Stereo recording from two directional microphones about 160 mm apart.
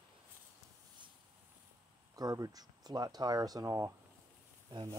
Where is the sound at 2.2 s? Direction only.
25° right (ahead or behind).